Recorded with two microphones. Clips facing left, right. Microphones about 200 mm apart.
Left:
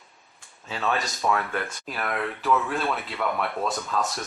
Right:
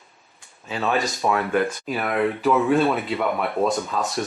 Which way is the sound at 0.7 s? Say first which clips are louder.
Right 4 dB; 15° right (ahead or behind).